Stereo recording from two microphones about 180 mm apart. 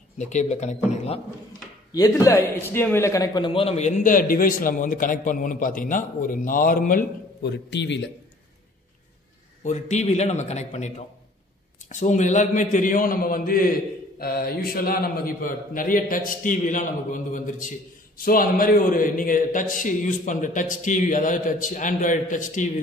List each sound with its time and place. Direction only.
0.2 s a man's voice: 40° left (ahead or behind)
2.0 s a man's voice: 20° left (ahead or behind); by 7.1 s 50° left (ahead or behind)
7.4 s a man's voice: 75° left (ahead or behind)
9.7 s a man's voice: 40° left (ahead or behind)
11.9 s a man's voice: 40° left (ahead or behind)